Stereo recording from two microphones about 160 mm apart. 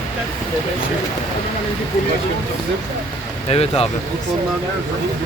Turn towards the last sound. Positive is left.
turn(degrees=40)  # may be behind; listen again after turning